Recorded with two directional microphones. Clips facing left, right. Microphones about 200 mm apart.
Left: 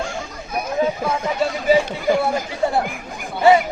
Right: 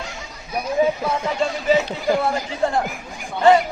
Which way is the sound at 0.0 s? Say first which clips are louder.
Left 7 dB; 50° left (ahead or behind).